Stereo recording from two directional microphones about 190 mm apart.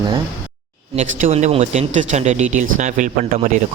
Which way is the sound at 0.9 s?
40° right (ahead or behind).